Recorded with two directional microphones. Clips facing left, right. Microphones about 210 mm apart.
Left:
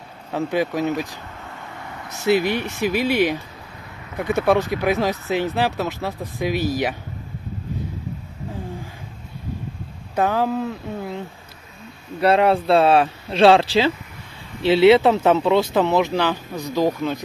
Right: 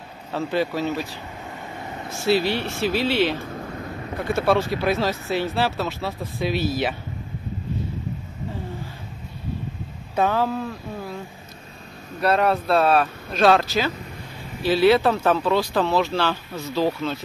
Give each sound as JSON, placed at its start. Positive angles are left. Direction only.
{"t": 0.3, "sound": "speech", "side_deg": 15}
{"t": 2.2, "sound": "speech", "side_deg": 15}
{"t": 3.3, "sound": "a sound", "side_deg": -50}
{"t": 4.2, "sound": "speech", "side_deg": 20}
{"t": 10.1, "sound": "speech", "side_deg": 10}
{"t": 12.2, "sound": "speech", "side_deg": 25}